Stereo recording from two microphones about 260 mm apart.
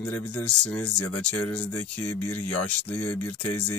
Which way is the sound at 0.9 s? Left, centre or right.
Left.